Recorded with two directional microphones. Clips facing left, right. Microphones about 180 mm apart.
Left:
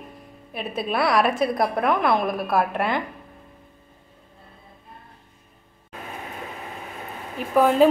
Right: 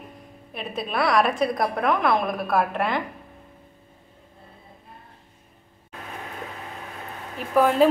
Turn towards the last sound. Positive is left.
turn(degrees=0)  # may be behind; listen again after turning